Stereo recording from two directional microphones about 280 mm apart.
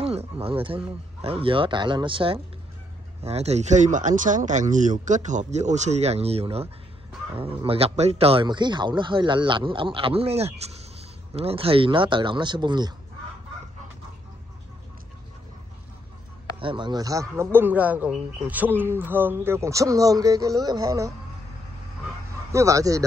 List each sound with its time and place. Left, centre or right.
0.0 s speech: right
16.5 s speech: centre
22.5 s speech: centre